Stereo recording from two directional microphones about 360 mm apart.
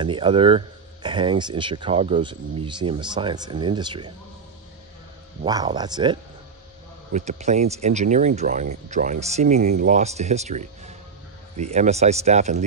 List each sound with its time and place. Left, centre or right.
0.0 s speech: centre
5.4 s speech: centre